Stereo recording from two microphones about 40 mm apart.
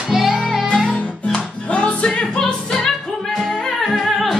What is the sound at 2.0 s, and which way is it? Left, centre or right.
Music, centre.